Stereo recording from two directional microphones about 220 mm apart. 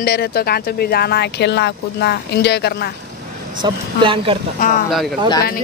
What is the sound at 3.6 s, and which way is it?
Speech, 25° right (ahead or behind).